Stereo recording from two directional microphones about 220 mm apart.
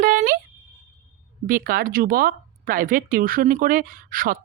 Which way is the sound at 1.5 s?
40° right (ahead or behind).